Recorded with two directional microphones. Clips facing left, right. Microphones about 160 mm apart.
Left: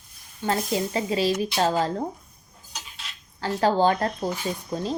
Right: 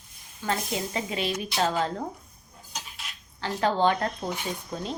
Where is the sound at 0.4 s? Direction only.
30° left (ahead or behind).